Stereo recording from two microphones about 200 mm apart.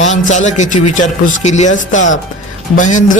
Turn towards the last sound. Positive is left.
turn(degrees=40)  # may be behind; listen again after turning